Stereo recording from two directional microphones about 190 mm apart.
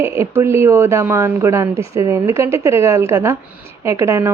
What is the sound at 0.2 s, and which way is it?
Speech, 15° right (ahead or behind).